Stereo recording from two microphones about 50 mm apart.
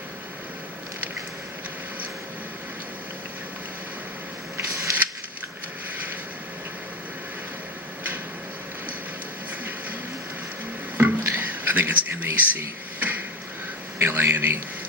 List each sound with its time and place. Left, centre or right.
10.9 s a sound: right
14.0 s a man's voice: right
14.3 s a man's voice: right